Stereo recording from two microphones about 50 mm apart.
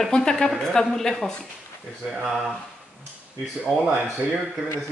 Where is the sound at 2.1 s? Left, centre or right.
Centre.